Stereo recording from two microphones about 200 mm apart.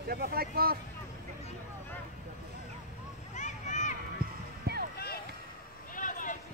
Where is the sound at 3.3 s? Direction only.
35° left (ahead or behind).